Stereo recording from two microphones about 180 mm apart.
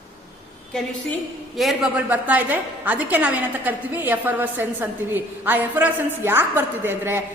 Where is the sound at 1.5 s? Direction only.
Centre (ahead or behind).